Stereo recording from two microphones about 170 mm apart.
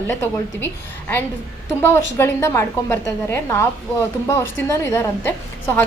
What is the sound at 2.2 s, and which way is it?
A woman's voice, 15° left (ahead or behind).